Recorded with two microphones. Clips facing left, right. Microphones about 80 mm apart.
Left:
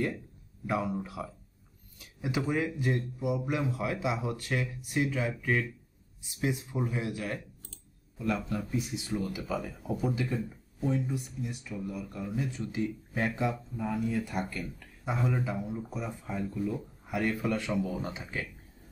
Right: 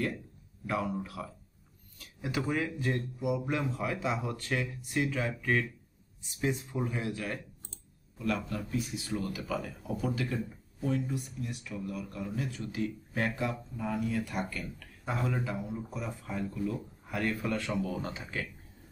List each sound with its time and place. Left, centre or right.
0.7 s speech: left
8.5 s speech: centre